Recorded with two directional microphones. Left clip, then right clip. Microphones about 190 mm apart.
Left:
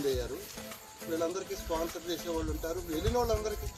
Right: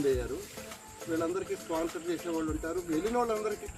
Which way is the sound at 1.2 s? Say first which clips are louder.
Right 1 dB; 15° right (ahead or behind).